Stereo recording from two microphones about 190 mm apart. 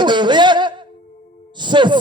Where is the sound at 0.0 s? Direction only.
25° right (ahead or behind).